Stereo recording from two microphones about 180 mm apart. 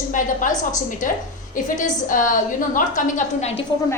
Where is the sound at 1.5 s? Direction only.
50° left (ahead or behind).